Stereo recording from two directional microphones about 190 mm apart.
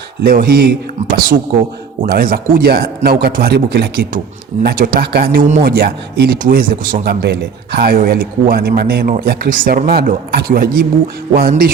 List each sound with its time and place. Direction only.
0.2 s a man's voice: 50° right (ahead or behind)
5.4 s speech: 35° right (ahead or behind)
5.6 s a man's voice: 55° right (ahead or behind)